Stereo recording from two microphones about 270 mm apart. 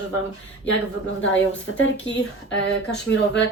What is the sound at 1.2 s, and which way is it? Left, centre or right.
A woman's voice, left.